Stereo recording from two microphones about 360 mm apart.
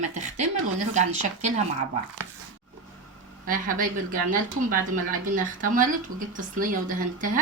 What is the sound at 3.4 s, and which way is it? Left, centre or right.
Speech, right.